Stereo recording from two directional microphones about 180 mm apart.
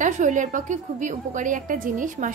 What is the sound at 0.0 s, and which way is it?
A woman's voice, 45° right (ahead or behind).